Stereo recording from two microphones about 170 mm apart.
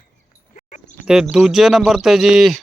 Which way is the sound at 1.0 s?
5° right (ahead or behind).